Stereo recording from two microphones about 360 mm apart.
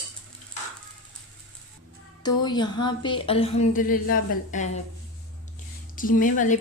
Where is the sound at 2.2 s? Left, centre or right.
Centre.